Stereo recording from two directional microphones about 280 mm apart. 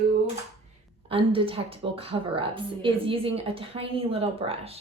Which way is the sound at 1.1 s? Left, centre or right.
Centre.